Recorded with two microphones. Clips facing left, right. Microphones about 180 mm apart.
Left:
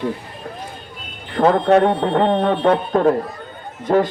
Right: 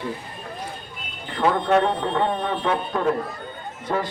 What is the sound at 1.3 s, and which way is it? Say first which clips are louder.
A man's voice: left 6 dB; 50° left (ahead or behind).